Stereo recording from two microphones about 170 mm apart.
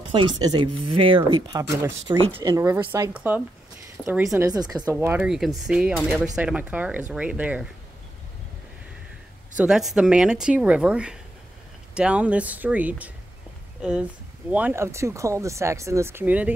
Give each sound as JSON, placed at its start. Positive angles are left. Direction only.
{"t": 0.4, "sound": "speech", "side_deg": -25}
{"t": 4.9, "sound": "a woman's voice", "side_deg": -10}
{"t": 9.6, "sound": "a woman's voice", "side_deg": -5}